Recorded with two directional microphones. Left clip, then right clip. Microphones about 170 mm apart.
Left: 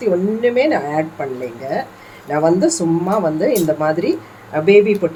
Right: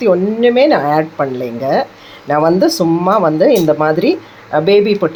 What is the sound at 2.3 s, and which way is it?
Speech, 30° right (ahead or behind).